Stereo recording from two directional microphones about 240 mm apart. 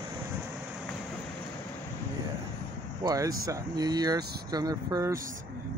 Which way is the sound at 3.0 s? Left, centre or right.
Centre.